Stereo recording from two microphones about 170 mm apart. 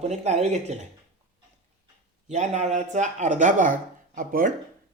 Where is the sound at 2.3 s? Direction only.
45° right (ahead or behind).